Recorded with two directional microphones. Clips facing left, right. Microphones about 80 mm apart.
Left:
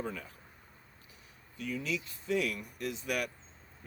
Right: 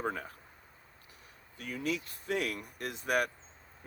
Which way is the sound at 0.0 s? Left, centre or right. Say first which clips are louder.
Right 4 dB; right.